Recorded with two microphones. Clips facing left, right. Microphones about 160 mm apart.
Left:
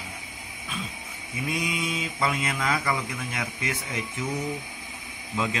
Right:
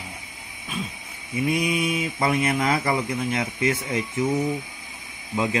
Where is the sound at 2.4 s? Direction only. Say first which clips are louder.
Right 5 dB; 30° right (ahead or behind).